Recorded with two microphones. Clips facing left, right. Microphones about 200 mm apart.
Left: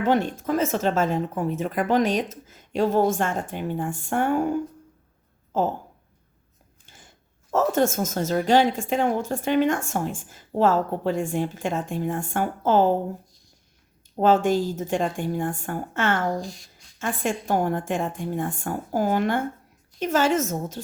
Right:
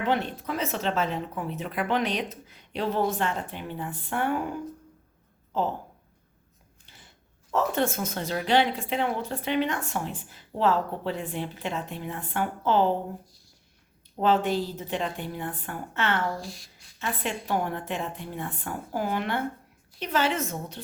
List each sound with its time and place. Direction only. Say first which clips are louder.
0.0 s a woman's voice: left 5 dB; 45° left (ahead or behind)
5.5 s a sound: left 4 dB; 45° left (ahead or behind)
6.8 s biting: left 3 dB; 45° left (ahead or behind)
7.5 s a woman's voice: left 5 dB; 45° left (ahead or behind)
14.2 s a woman's voice: left 4 dB; 45° left (ahead or behind)
16.4 s speech: left 5 dB; 5° right (ahead or behind)
17.0 s a woman's voice: left 5 dB; 45° left (ahead or behind)